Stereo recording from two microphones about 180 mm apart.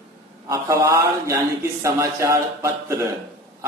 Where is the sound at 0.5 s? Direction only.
15° right (ahead or behind).